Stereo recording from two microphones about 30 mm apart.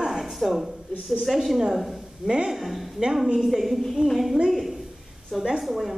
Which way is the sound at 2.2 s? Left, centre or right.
Right.